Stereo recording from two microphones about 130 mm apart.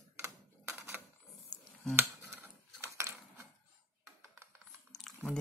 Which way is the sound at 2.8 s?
20° right (ahead or behind).